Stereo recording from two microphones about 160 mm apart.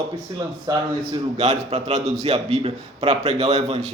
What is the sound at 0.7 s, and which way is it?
Speech, 25° right (ahead or behind).